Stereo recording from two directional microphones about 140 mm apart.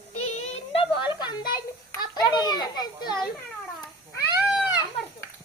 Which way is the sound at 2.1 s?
30° left (ahead or behind).